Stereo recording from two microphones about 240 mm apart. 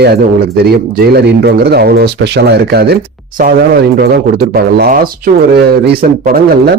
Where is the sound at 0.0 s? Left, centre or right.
Right.